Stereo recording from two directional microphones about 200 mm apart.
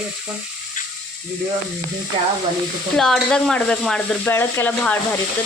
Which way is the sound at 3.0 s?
Centre (ahead or behind).